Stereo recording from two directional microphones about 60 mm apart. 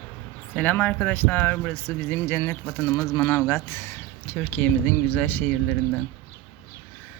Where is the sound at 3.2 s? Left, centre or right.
Left.